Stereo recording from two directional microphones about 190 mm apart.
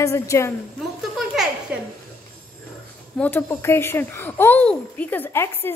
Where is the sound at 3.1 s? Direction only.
10° left (ahead or behind).